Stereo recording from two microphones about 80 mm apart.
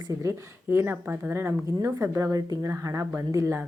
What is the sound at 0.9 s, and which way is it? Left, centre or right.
Speech, centre.